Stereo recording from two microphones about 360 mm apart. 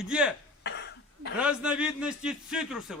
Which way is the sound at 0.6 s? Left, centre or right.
Left.